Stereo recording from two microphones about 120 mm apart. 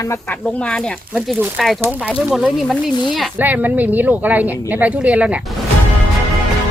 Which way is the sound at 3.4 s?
15° right (ahead or behind).